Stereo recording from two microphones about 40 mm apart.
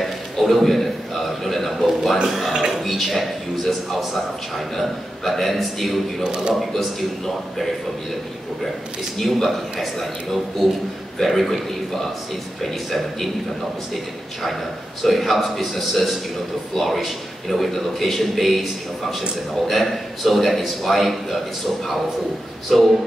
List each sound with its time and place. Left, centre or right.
0.0 s a sound: centre
2.8 s a man's voice: centre
6.2 s speech: centre
6.5 s a man's voice: centre
9.2 s a man's voice: centre
11.2 s a man's voice: centre
15.0 s a man's voice: centre
22.7 s a man's voice: centre